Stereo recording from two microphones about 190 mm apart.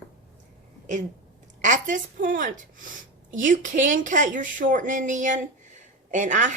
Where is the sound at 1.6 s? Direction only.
40° right (ahead or behind).